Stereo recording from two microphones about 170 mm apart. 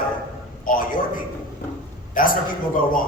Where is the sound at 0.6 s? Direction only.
55° left (ahead or behind).